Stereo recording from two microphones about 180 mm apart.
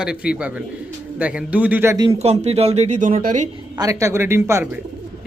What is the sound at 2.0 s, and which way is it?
Speech, 35° right (ahead or behind).